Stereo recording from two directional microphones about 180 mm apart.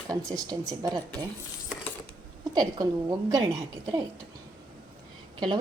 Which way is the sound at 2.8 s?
20° right (ahead or behind).